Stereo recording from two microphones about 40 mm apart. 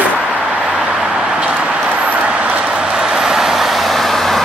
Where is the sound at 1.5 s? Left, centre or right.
Right.